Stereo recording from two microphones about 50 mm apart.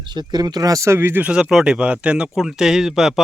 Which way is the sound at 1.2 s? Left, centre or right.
Centre.